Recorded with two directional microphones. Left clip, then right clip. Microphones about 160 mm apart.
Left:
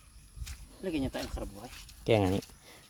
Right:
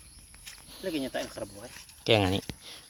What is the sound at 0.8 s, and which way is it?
Speech, 70° left (ahead or behind).